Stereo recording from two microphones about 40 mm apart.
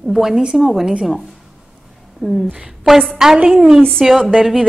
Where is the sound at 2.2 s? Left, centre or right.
Centre.